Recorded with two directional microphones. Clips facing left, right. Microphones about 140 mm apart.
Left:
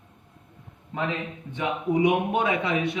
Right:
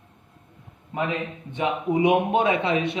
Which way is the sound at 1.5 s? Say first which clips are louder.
Right 2 dB; 20° right (ahead or behind).